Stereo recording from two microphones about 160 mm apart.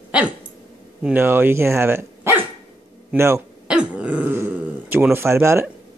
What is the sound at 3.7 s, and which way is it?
Throat clearing, 5° right (ahead or behind).